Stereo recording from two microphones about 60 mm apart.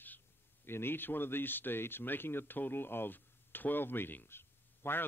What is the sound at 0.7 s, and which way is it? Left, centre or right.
Speech, left.